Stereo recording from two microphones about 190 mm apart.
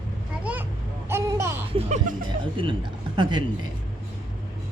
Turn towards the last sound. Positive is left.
turn(degrees=-25)  # may be behind; listen again after turning